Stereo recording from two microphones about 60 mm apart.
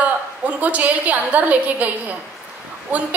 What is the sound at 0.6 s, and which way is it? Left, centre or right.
A woman's voice, right.